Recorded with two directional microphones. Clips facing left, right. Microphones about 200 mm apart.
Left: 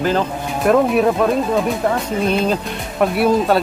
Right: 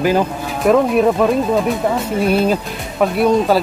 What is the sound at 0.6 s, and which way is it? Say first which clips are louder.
Speech: right 1 dB; centre (ahead or behind).